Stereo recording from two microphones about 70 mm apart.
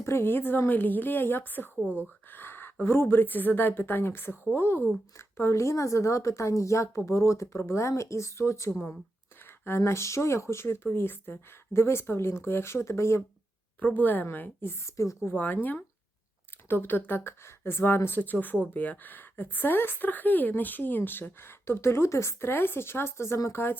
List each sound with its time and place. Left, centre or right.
0.0 s a woman's voice: left
1.8 s speech: centre
2.3 s a sound: left
2.8 s a woman's voice: left
13.7 s a woman's voice: left
14.8 s a woman's voice: left
15.3 s a woman's voice: left